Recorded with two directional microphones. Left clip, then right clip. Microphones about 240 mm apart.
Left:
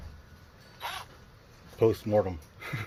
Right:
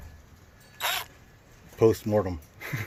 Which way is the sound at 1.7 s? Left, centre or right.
Right.